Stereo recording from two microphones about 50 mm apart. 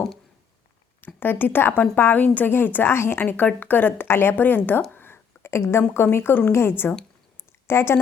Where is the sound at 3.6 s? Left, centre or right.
Left.